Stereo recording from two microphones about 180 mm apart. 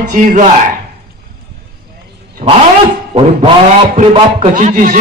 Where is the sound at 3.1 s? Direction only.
35° right (ahead or behind).